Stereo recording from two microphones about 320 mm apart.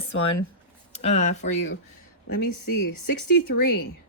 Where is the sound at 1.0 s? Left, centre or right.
Left.